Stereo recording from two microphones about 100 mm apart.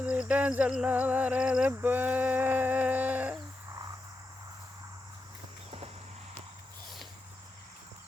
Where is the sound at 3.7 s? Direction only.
40° right (ahead or behind).